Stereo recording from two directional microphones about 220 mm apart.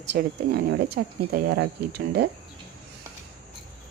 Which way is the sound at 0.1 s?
45° right (ahead or behind).